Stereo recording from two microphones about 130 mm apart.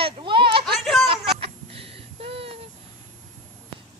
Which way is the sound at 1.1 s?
45° right (ahead or behind).